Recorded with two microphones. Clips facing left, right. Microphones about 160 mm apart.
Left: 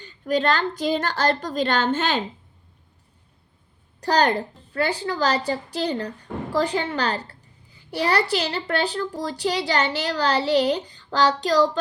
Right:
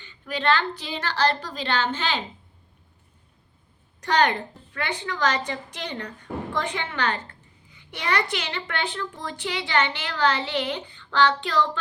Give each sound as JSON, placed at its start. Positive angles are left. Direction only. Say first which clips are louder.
{"t": 0.0, "sound": "a woman's voice", "louder": "left 5 dB", "side_deg": 40}
{"t": 4.0, "sound": "a child's voice", "louder": "left 2 dB", "side_deg": 35}